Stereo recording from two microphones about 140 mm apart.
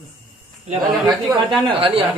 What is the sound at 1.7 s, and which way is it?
Speech, 40° right (ahead or behind).